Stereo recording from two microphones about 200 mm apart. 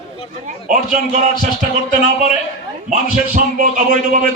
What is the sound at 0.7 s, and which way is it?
Speech, 40° right (ahead or behind).